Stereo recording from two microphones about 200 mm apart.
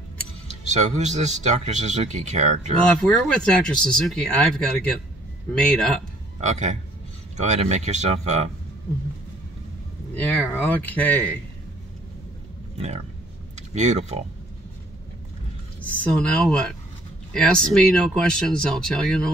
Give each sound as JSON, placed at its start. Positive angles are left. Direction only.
{"t": 0.5, "sound": "speech", "side_deg": -35}
{"t": 3.0, "sound": "speech", "side_deg": 5}
{"t": 5.5, "sound": "speech", "side_deg": 5}
{"t": 6.4, "sound": "speech", "side_deg": -35}
{"t": 10.1, "sound": "speech", "side_deg": 10}
{"t": 12.7, "sound": "speech", "side_deg": -30}
{"t": 15.8, "sound": "speech", "side_deg": 5}